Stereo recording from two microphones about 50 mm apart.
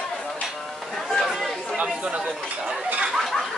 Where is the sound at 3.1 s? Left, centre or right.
Centre.